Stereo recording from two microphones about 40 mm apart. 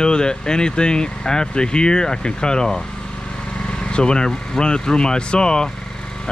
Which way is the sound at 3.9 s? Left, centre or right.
Left.